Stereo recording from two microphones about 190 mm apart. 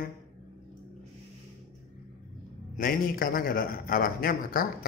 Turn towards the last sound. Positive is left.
turn(degrees=50)  # may be behind; listen again after turning